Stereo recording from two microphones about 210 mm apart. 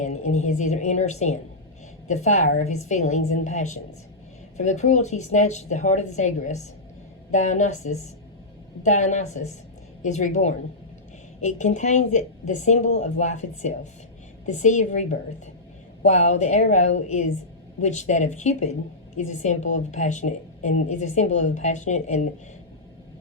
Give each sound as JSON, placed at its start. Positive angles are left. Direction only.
{"t": 0.0, "sound": "a woman's voice", "side_deg": 35}